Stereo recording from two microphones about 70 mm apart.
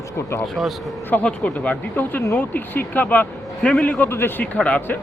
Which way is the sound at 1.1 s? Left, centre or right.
Centre.